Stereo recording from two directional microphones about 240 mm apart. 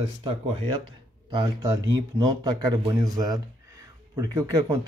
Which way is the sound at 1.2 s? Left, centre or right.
Centre.